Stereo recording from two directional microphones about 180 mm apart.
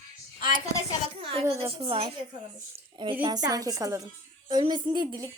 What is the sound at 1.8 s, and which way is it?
Speech, 30° right (ahead or behind).